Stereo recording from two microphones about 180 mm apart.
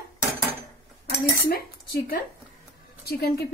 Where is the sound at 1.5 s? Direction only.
55° left (ahead or behind).